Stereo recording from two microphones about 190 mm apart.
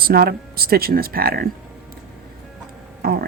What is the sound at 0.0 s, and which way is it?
Speech, 55° right (ahead or behind).